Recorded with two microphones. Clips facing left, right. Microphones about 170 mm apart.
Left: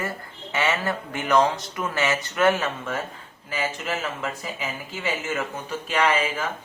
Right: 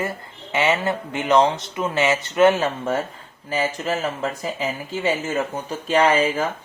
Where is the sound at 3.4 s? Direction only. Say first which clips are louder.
Right 5 dB; 35° right (ahead or behind).